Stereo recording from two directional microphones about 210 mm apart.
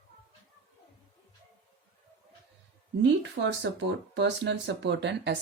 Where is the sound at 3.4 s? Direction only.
55° right (ahead or behind).